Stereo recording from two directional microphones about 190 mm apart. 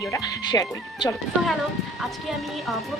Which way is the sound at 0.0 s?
20° left (ahead or behind).